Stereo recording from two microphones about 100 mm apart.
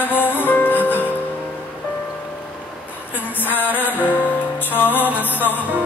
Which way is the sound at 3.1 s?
20° left (ahead or behind).